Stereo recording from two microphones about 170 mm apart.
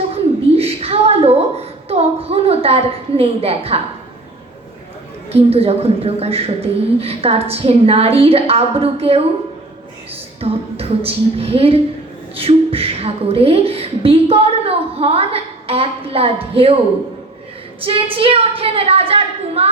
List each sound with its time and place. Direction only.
0.1 s a sound: 35° right (ahead or behind)
5.3 s a woman's voice: 35° right (ahead or behind)
10.4 s a woman's voice: 35° right (ahead or behind)
17.7 s a woman's voice: 30° right (ahead or behind)